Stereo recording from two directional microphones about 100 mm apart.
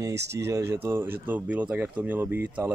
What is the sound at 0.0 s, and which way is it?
Speech, 30° right (ahead or behind).